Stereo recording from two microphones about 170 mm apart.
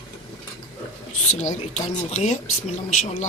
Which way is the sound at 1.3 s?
45° left (ahead or behind).